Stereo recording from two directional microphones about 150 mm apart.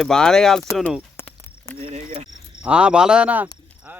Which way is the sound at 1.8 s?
45° right (ahead or behind).